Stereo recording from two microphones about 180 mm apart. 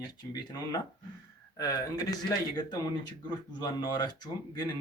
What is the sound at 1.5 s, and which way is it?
Speech, 20° left (ahead or behind).